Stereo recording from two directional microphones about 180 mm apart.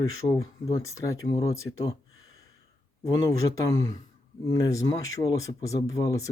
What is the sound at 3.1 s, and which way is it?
Speech, 20° left (ahead or behind).